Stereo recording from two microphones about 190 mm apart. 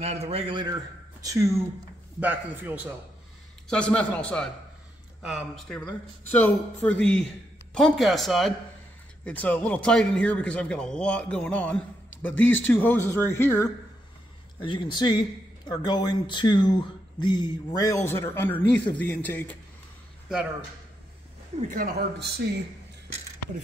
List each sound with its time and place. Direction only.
0.0 s a man's voice: 35° right (ahead or behind); by 2.9 s 10° right (ahead or behind)
3.6 s a man's voice: 5° left (ahead or behind)
14.6 s a man's voice: 25° left (ahead or behind); by 19.5 s 10° left (ahead or behind)
21.5 s speech: 45° right (ahead or behind)